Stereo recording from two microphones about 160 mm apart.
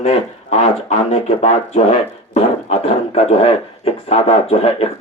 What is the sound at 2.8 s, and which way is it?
Speech, 40° left (ahead or behind).